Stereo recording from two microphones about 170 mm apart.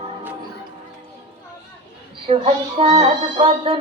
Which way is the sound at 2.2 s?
35° right (ahead or behind).